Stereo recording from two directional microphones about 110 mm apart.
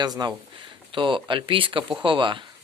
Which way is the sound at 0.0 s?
40° right (ahead or behind).